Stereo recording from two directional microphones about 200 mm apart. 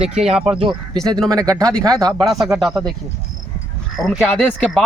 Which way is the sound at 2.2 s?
Centre (ahead or behind).